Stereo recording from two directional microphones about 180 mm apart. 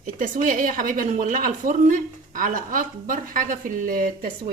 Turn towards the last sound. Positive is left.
turn(degrees=-50)  # may be behind; listen again after turning